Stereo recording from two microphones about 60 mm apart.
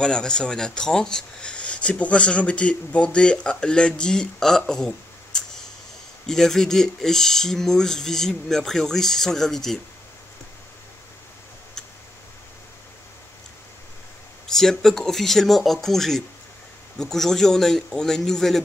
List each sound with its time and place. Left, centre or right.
0.0 s speech: centre
14.5 s speech: centre